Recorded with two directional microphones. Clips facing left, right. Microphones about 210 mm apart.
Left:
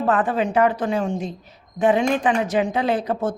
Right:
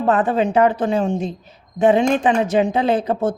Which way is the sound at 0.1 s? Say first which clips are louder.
Right 4 dB; 25° right (ahead or behind).